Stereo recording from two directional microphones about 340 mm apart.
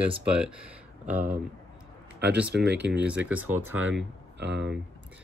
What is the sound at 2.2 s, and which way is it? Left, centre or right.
Speech, right.